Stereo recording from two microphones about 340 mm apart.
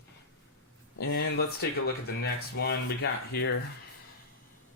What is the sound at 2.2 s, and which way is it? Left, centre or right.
Speech, left.